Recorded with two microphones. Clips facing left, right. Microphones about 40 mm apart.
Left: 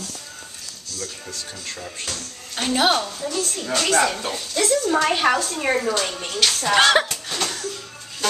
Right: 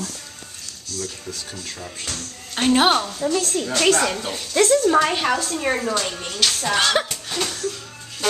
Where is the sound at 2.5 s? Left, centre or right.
Right.